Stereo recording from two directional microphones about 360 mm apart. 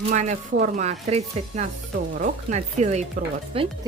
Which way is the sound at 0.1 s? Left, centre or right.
Centre.